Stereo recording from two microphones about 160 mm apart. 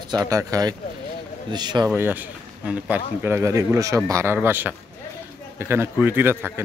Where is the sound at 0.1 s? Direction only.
20° right (ahead or behind).